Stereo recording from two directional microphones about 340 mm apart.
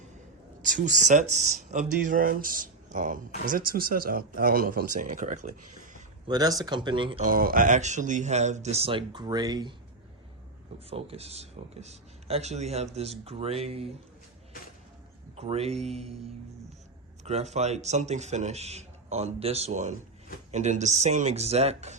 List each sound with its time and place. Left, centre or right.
0.6 s speech: right
10.8 s speech: centre
15.4 s speech: centre
17.2 s speech: centre